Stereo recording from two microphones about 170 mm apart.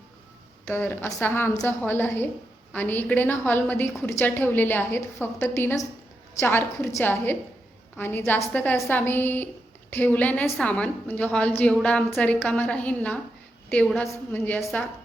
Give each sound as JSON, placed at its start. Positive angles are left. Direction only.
{"t": 0.7, "sound": "a woman's voice", "side_deg": 10}